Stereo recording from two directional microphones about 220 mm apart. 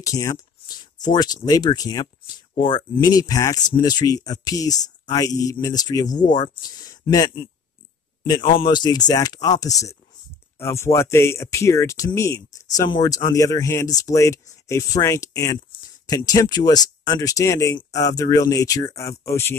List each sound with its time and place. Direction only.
0.0 s a man's voice: 15° left (ahead or behind)